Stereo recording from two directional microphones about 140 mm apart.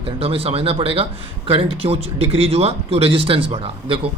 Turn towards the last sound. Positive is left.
turn(degrees=-40)  # may be behind; listen again after turning